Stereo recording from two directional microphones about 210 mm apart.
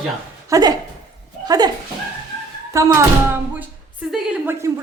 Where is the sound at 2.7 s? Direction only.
15° right (ahead or behind).